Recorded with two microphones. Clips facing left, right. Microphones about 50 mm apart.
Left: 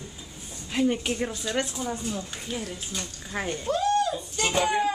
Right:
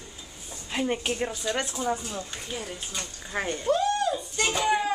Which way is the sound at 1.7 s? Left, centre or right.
Centre.